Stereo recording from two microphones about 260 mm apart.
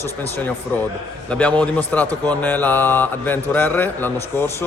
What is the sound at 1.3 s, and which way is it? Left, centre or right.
A man's voice, centre.